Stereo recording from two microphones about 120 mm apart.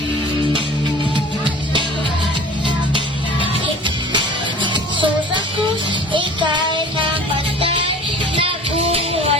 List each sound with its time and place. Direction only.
3.4 s music: 40° right (ahead or behind)
8.4 s music: 50° right (ahead or behind)